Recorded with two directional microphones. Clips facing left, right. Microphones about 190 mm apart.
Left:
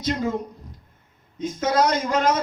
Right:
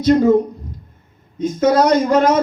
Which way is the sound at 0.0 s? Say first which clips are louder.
Right 13 dB; 55° right (ahead or behind).